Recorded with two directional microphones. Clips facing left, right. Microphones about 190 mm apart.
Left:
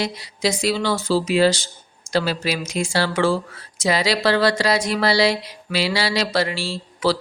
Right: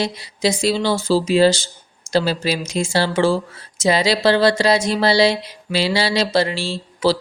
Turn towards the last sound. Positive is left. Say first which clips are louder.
# right 3 dB
turn(degrees=-25)  # may be behind; listen again after turning